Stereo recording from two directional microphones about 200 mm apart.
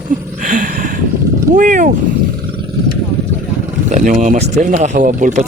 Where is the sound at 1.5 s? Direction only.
40° right (ahead or behind).